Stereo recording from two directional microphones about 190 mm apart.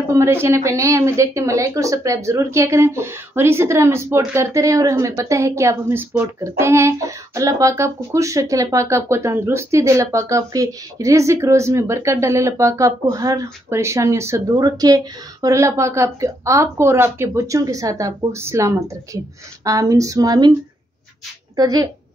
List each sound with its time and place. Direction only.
0.1 s speech: 15° right (ahead or behind)
21.5 s a woman's voice: 20° right (ahead or behind)